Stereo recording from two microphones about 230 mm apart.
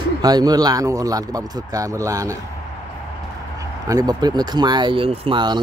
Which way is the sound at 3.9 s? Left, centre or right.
Centre.